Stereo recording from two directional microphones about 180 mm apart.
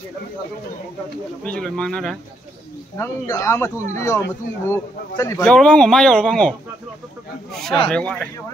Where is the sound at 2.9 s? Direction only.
15° left (ahead or behind).